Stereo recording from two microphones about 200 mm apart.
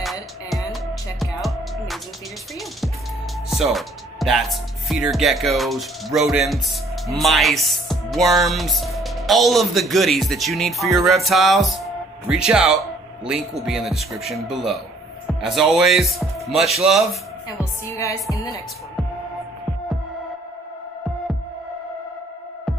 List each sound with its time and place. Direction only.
0.0 s music: centre (ahead or behind)
3.4 s speech: centre (ahead or behind)
17.6 s a woman's voice: 15° left (ahead or behind)